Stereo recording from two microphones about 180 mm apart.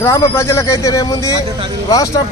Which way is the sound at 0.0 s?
15° left (ahead or behind).